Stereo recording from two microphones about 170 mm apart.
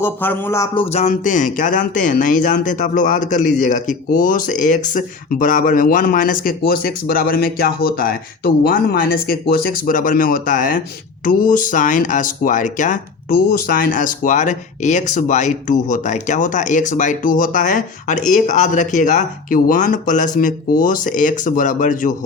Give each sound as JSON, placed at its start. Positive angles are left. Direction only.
{"t": 0.0, "sound": "speech", "side_deg": 10}
{"t": 0.7, "sound": "music", "side_deg": 30}
{"t": 1.0, "sound": "speech", "side_deg": 50}